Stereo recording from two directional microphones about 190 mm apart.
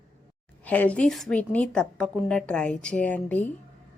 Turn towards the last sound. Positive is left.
turn(degrees=10)  # may be behind; listen again after turning